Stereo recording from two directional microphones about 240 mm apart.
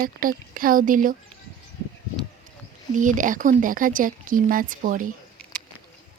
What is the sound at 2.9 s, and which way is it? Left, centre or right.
Speech, right.